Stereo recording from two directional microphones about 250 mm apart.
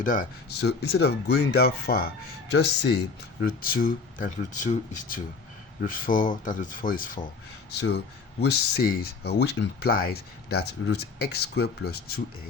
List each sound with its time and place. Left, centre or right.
0.0 s speech: left